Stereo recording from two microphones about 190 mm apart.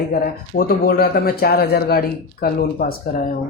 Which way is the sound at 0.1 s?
55° left (ahead or behind).